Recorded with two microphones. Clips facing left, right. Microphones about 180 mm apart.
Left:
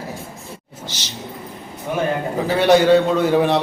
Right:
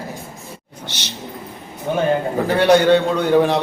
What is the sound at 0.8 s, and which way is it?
Speech, 60° right (ahead or behind).